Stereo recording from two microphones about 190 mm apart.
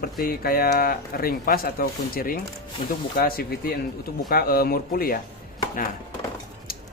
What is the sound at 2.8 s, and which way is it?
Speech, 25° left (ahead or behind).